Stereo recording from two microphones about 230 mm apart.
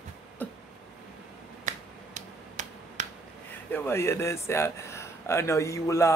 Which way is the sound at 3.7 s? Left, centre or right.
Centre.